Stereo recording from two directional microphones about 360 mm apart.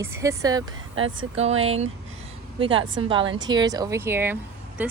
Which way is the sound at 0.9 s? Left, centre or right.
Right.